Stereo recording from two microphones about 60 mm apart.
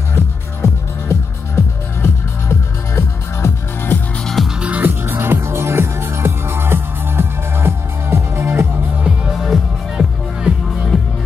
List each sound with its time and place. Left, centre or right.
0.6 s music: left
3.4 s music: left
4.2 s music: centre
4.6 s music: right
4.8 s music: right
9.3 s music: centre